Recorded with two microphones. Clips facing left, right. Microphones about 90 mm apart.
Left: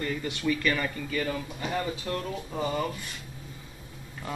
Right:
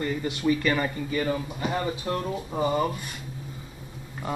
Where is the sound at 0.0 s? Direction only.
20° right (ahead or behind).